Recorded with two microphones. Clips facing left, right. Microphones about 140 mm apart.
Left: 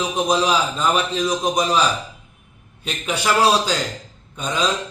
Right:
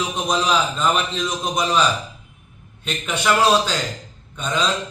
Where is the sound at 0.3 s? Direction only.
5° left (ahead or behind).